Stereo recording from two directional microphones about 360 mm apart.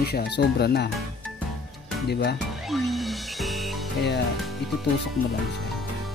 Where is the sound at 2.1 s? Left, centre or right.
Left.